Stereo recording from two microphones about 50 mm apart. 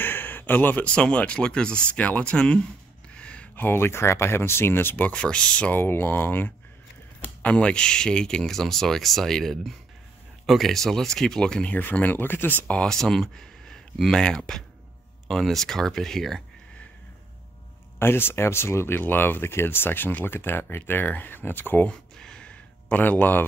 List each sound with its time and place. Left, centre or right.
0.0 s a sound: left
0.8 s speech: left
3.2 s a sound: left
3.5 s speech: left
5.1 s speech: left
5.7 s speech: left
7.4 s speech: left
11.7 s speech: left
12.8 s speech: centre
17.9 s speech: left
18.9 s speech: left
22.2 s gasp: centre
22.9 s speech: left